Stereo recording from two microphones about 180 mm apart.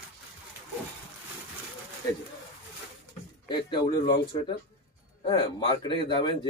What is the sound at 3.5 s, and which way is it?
A man's voice, 25° left (ahead or behind).